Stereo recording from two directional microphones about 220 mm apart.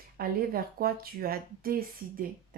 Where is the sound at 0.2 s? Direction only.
40° right (ahead or behind).